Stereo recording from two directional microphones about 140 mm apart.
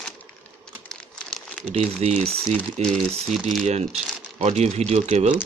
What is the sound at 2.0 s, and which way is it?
Speech, 50° right (ahead or behind).